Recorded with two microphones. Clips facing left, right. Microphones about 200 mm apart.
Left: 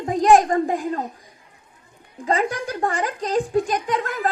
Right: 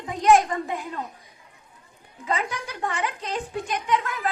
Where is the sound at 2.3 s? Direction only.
40° left (ahead or behind).